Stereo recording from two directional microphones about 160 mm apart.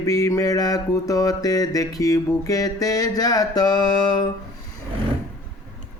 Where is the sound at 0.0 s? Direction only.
20° left (ahead or behind).